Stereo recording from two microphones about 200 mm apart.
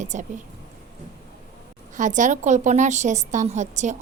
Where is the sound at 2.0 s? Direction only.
40° right (ahead or behind).